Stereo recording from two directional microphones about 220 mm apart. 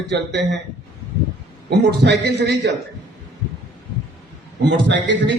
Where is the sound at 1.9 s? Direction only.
50° right (ahead or behind).